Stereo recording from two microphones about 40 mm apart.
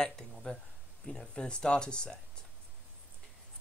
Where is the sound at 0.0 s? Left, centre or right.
Centre.